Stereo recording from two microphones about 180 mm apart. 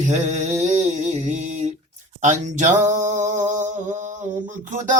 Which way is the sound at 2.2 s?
45° right (ahead or behind).